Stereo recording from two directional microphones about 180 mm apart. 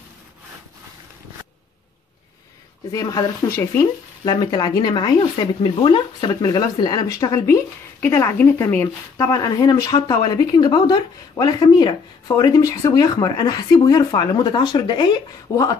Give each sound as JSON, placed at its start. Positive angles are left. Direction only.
{"t": 2.9, "sound": "speech", "side_deg": 20}